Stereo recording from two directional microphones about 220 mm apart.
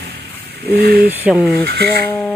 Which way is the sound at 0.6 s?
45° right (ahead or behind).